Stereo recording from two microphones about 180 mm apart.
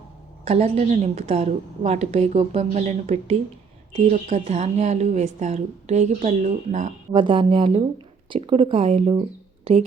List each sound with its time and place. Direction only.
0.4 s a woman's voice: 35° right (ahead or behind)
7.1 s speech: 30° right (ahead or behind)